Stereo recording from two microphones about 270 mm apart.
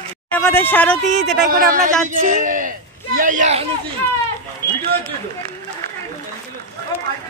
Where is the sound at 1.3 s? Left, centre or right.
Right.